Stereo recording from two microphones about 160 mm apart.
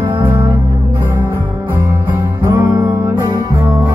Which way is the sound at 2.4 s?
20° right (ahead or behind).